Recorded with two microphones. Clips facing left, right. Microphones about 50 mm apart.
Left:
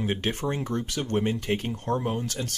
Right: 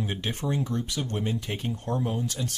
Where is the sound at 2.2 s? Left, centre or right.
Left.